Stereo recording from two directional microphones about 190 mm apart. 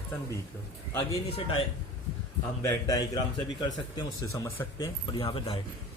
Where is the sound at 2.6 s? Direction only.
15° left (ahead or behind).